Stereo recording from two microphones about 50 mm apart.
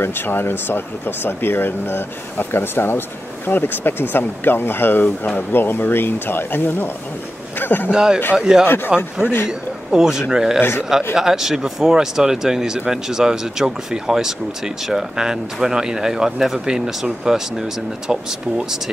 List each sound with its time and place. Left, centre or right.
0.0 s speech: left
7.9 s speech: centre
8.6 s speech: left
9.5 s speech: centre